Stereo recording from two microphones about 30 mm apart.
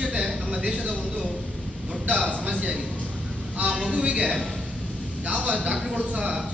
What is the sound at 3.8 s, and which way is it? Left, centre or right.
Speech, right.